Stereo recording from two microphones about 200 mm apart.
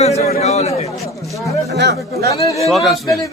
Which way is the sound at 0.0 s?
30° left (ahead or behind).